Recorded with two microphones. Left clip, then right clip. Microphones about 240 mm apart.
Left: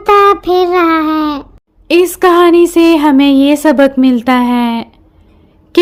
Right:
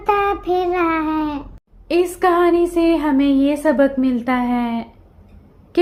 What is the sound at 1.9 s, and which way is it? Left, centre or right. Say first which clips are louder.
Speech: left 8 dB; left.